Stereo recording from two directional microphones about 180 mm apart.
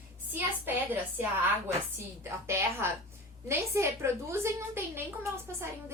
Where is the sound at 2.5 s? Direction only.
15° right (ahead or behind).